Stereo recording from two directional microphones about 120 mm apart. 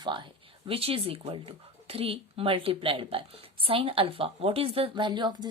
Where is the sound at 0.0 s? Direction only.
40° right (ahead or behind).